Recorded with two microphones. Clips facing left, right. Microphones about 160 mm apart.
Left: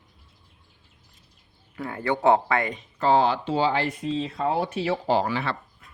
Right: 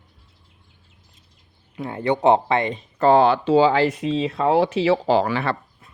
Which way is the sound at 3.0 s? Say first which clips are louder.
Right 5 dB; 55° right (ahead or behind).